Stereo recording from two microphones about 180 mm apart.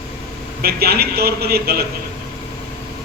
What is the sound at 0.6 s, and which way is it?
A man's voice, 60° right (ahead or behind).